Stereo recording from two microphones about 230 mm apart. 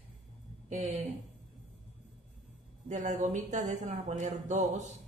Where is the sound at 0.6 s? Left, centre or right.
Right.